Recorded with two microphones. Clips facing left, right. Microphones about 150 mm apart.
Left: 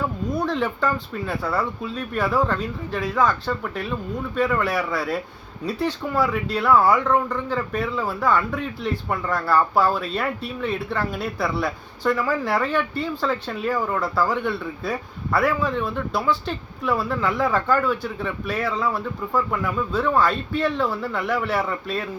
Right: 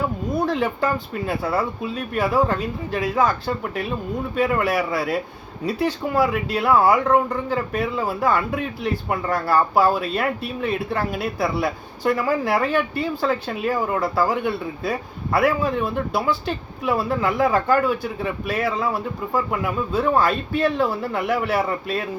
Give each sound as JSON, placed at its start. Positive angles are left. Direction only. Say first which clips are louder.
{"t": 0.5, "sound": "speech", "louder": "right 1 dB", "side_deg": -10}